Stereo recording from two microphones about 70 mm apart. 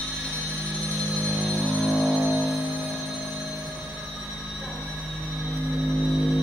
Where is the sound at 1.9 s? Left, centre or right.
Centre.